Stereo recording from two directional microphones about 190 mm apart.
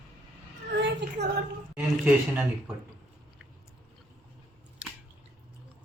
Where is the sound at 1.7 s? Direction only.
10° right (ahead or behind).